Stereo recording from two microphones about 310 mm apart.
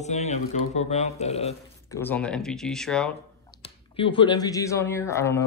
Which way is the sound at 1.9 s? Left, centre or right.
Centre.